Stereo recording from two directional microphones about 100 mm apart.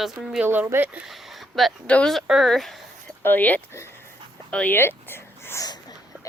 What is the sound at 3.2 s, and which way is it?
Speech, 15° left (ahead or behind).